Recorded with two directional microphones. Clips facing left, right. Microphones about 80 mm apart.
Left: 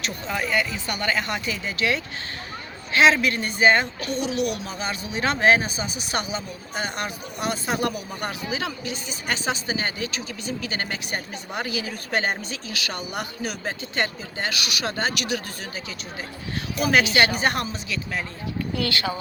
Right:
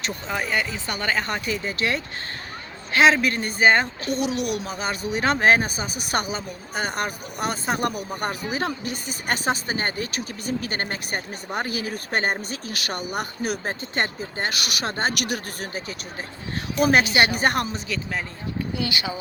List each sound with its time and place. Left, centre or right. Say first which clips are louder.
0.5 s speech: left 1 dB; right
4.4 s speech: left 1 dB; left
4.6 s speech: right 2 dB; right
16.8 s speech: right 1 dB; right
18.8 s speech: left 3 dB; centre